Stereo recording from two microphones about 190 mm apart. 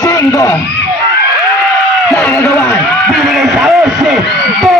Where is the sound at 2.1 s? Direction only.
10° left (ahead or behind).